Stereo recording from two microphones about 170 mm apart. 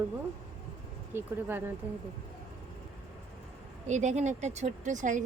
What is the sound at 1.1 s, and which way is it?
Speech, 10° right (ahead or behind).